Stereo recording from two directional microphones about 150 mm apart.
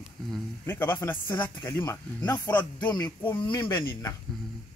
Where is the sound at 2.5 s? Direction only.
30° left (ahead or behind).